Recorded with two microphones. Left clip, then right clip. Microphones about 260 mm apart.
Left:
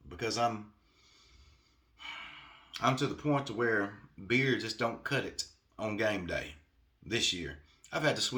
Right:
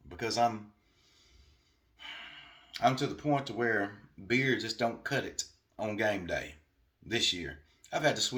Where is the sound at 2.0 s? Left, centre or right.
Centre.